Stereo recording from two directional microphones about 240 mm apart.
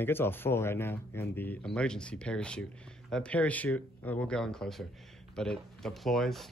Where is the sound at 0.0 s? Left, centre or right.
Centre.